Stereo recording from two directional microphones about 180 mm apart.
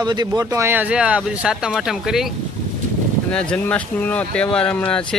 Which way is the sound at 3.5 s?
5° left (ahead or behind).